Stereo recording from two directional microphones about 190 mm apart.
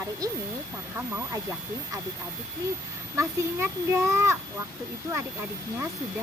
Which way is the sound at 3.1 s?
15° right (ahead or behind).